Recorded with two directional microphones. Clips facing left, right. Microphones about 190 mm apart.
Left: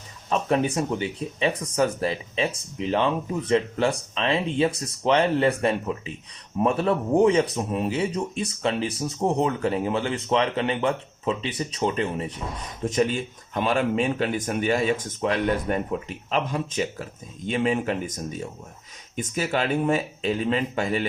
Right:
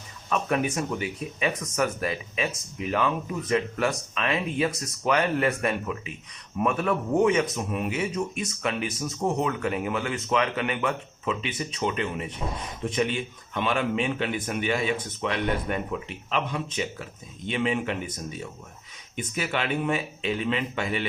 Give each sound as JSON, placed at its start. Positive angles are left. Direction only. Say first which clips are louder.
{"t": 0.3, "sound": "speech", "louder": "left 3 dB", "side_deg": 30}
{"t": 19.1, "sound": "speech", "louder": "left 4 dB", "side_deg": 40}